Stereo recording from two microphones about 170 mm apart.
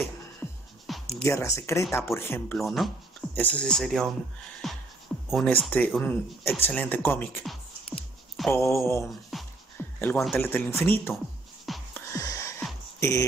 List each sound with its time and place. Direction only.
0.9 s a sound: centre (ahead or behind)
1.2 s speech: 15° left (ahead or behind)
2.6 s speech: centre (ahead or behind)
4.6 s music: centre (ahead or behind)
5.3 s speech: centre (ahead or behind)
7.4 s music: centre (ahead or behind)
8.5 s speech: 15° left (ahead or behind)
9.3 s music: centre (ahead or behind)
9.8 s a sound: 10° left (ahead or behind)
10.3 s speech: 10° left (ahead or behind)
11.6 s music: centre (ahead or behind)
12.1 s gasp: 20° left (ahead or behind)